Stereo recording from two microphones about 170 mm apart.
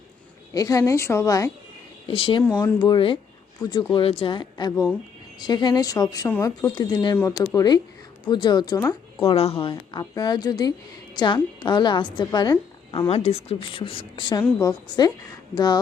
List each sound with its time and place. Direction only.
0.5 s a woman's voice: 20° left (ahead or behind)
2.0 s a woman's voice: 30° left (ahead or behind)
9.2 s a woman's voice: 35° left (ahead or behind)
13.1 s a woman's voice: 40° left (ahead or behind)